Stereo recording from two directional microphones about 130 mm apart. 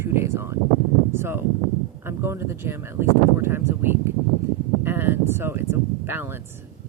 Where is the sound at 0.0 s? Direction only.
20° right (ahead or behind).